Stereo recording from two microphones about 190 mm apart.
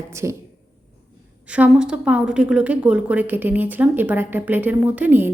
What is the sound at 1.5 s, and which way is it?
A woman's voice, 5° right (ahead or behind).